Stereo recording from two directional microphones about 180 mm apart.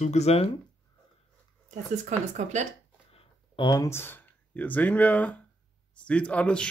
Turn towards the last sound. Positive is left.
turn(degrees=5)  # may be behind; listen again after turning